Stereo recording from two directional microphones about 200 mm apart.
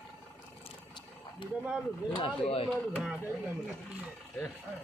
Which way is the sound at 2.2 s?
25° left (ahead or behind).